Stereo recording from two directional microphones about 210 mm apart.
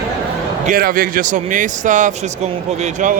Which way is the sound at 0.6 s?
40° right (ahead or behind).